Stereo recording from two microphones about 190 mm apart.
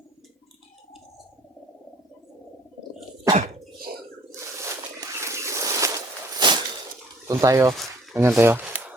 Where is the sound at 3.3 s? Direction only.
50° right (ahead or behind).